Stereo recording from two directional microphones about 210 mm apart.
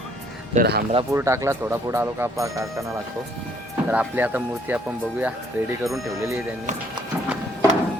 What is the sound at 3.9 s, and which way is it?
Speech, 10° right (ahead or behind).